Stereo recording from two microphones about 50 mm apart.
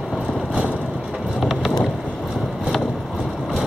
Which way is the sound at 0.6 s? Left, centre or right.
Right.